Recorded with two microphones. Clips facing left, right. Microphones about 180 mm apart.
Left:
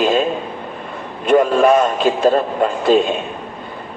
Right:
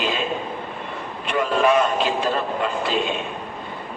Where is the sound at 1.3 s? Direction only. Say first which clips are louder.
Left 7 dB; 45° left (ahead or behind).